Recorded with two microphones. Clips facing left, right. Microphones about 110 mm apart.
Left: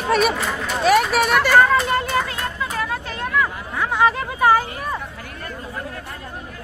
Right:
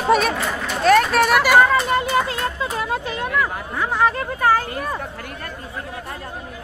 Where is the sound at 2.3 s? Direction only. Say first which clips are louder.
Right 2 dB; 20° right (ahead or behind).